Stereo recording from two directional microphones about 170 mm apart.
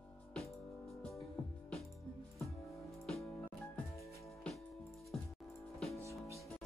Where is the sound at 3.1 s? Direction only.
5° left (ahead or behind).